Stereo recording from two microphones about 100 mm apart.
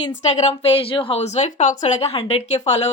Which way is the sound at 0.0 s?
90° left.